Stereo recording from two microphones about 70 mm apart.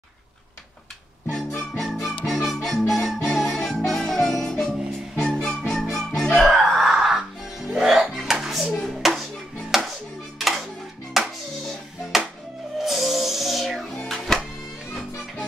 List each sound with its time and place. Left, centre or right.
1.3 s music: centre
11.1 s music: centre